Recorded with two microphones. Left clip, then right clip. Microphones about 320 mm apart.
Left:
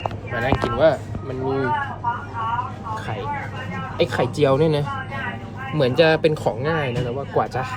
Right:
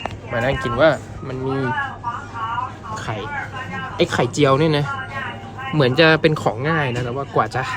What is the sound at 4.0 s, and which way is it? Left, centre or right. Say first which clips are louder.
Speech: right 2 dB; right.